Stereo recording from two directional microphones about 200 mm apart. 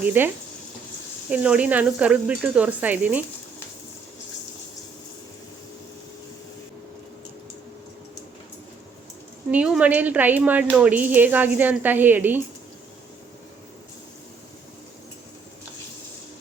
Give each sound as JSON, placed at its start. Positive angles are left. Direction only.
{"t": 0.0, "sound": "speech", "side_deg": -10}
{"t": 1.3, "sound": "speech", "side_deg": -5}
{"t": 9.5, "sound": "speech", "side_deg": -5}